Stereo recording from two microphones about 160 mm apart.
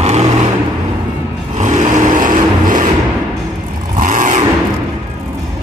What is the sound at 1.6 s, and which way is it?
Vehicle, 50° right (ahead or behind).